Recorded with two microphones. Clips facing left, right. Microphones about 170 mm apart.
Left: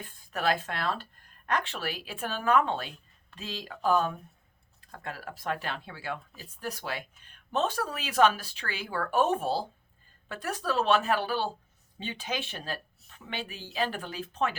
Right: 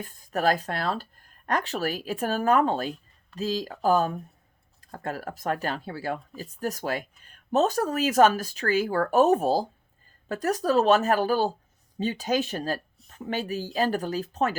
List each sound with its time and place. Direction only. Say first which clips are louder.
0.0 s speech: right 5 dB; 40° right (ahead or behind)